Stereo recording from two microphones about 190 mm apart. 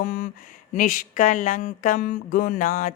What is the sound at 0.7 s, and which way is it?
Speech, 45° left (ahead or behind).